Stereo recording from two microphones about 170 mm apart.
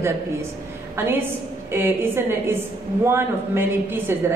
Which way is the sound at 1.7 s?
15° right (ahead or behind).